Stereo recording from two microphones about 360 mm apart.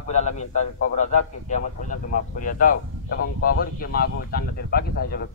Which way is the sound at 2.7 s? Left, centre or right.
Left.